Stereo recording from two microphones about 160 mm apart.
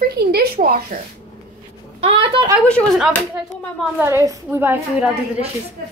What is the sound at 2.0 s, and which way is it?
Speech, 35° right (ahead or behind).